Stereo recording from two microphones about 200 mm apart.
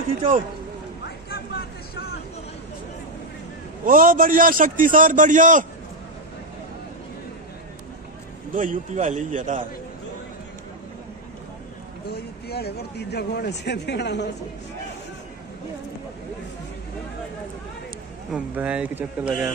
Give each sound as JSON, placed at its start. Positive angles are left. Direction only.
{"t": 1.0, "sound": "a sound", "side_deg": 50}
{"t": 3.8, "sound": "a man's voice", "side_deg": -45}
{"t": 8.5, "sound": "a man's voice", "side_deg": -40}
{"t": 12.1, "sound": "speech", "side_deg": 55}
{"t": 18.3, "sound": "speech", "side_deg": -5}